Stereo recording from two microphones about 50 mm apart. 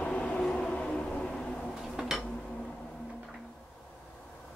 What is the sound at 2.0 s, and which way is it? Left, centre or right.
Dishes, centre.